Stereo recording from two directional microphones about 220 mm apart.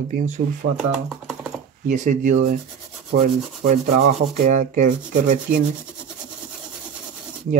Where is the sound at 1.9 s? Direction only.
35° right (ahead or behind).